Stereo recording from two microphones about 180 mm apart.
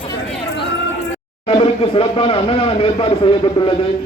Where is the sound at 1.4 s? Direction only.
30° left (ahead or behind).